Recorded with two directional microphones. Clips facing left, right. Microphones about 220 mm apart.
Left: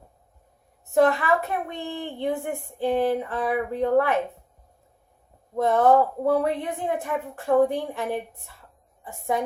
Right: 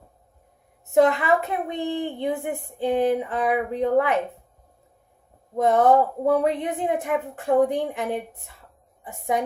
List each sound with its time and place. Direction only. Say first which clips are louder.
0.9 s a woman's voice: right 2 dB; 20° right (ahead or behind)
5.5 s a woman's voice: right 1 dB; 20° right (ahead or behind)